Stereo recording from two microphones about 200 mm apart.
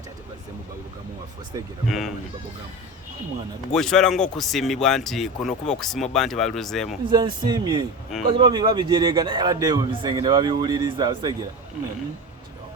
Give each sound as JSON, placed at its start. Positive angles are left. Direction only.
{"t": 1.5, "sound": "speech", "side_deg": -15}
{"t": 1.9, "sound": "a man's voice", "side_deg": 0}
{"t": 3.7, "sound": "a man's voice", "side_deg": 0}
{"t": 7.1, "sound": "a man's voice", "side_deg": -20}